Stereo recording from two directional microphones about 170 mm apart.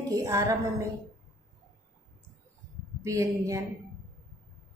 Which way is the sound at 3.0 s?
20° right (ahead or behind).